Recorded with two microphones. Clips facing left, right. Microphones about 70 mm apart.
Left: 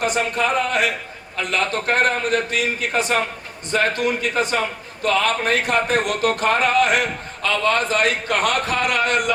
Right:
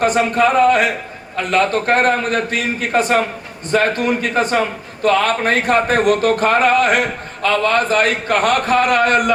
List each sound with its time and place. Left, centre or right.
0.0 s speech: right